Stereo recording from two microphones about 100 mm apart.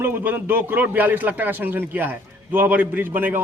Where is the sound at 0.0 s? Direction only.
20° right (ahead or behind).